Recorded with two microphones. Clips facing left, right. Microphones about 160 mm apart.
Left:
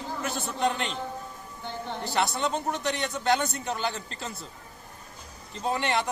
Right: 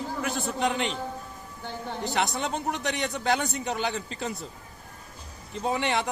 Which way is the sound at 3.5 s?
15° right (ahead or behind).